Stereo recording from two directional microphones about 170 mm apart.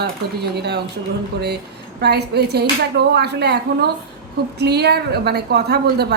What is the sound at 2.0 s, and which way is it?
A woman's voice, 75° right (ahead or behind).